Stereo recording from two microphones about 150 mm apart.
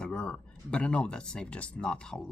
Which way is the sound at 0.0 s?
5° left (ahead or behind).